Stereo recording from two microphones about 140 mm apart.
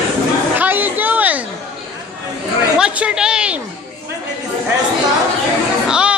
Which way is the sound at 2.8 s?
10° right (ahead or behind).